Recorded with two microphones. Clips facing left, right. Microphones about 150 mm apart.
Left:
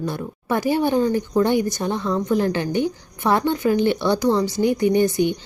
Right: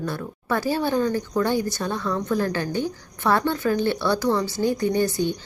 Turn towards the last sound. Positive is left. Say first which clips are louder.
# left 4 dB
turn(degrees=20)  # may be behind; listen again after turning